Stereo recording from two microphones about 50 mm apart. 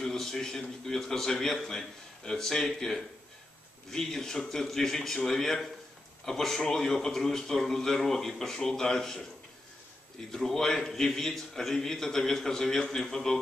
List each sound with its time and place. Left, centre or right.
0.0 s a man's voice: centre
10.3 s a man's voice: centre